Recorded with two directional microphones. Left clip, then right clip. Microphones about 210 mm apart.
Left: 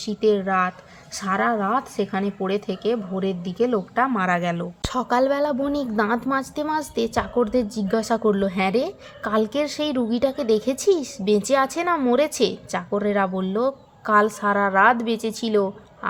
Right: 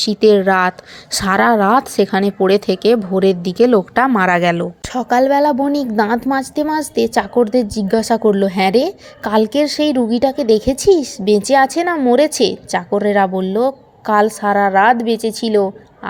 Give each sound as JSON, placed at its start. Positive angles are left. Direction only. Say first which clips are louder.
{"t": 0.0, "sound": "speech", "louder": "right 10 dB", "side_deg": -30}
{"t": 4.9, "sound": "a woman's voice", "louder": "right 7 dB", "side_deg": -15}